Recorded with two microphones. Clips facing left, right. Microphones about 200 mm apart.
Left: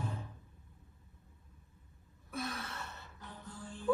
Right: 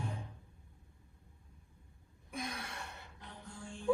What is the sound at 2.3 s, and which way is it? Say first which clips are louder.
Gasp: left 2 dB; 15° right (ahead or behind).